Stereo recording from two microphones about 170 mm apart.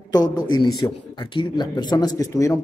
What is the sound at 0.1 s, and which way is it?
A man's voice, 25° left (ahead or behind).